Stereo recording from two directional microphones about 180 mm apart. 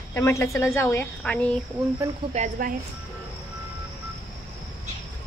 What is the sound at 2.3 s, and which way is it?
Speech, 40° right (ahead or behind).